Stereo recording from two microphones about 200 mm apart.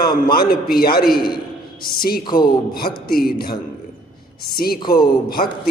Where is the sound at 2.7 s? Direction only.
50° left (ahead or behind).